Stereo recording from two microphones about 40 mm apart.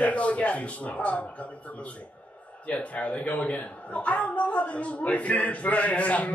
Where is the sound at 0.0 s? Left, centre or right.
Left.